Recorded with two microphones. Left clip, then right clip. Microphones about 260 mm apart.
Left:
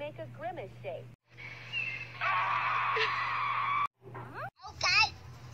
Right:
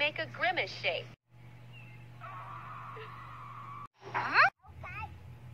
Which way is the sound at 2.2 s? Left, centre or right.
Left.